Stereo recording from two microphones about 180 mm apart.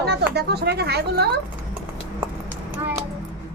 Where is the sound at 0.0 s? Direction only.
65° right (ahead or behind).